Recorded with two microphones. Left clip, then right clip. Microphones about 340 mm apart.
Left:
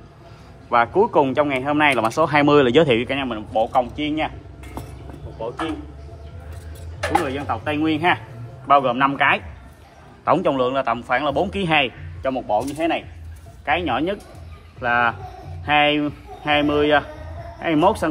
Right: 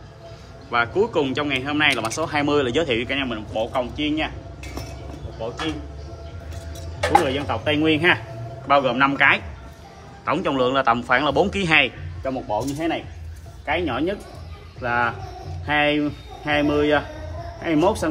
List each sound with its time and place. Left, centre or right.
0.7 s speech: centre
7.1 s a man's voice: centre
12.2 s speech: left
13.7 s speech: centre